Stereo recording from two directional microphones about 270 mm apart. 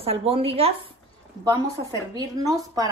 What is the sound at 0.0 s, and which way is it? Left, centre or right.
Speech, right.